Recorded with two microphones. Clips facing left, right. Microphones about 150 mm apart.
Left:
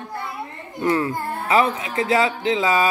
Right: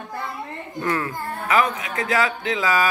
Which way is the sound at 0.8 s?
25° left (ahead or behind).